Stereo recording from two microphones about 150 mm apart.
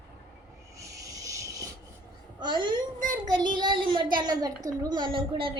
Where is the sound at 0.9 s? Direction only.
20° right (ahead or behind).